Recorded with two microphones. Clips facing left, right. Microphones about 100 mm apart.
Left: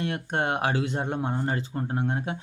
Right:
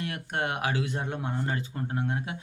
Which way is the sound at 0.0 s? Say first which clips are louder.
Left 4 dB; 30° left (ahead or behind).